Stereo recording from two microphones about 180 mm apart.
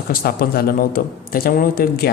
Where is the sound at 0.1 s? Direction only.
55° left (ahead or behind).